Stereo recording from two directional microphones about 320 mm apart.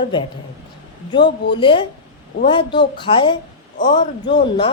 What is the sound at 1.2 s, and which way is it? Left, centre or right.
Speech, left.